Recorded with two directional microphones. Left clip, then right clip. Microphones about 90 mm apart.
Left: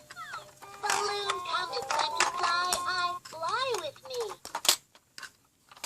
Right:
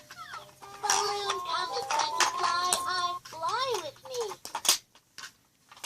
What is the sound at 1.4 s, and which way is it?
Music, 15° left (ahead or behind).